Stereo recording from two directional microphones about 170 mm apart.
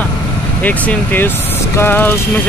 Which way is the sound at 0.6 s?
10° left (ahead or behind).